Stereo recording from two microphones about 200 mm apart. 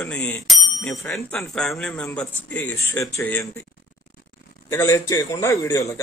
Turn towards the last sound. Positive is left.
turn(degrees=15)  # may be behind; listen again after turning